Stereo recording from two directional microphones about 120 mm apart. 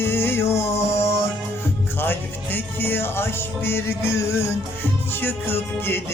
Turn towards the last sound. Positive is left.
turn(degrees=20)  # may be behind; listen again after turning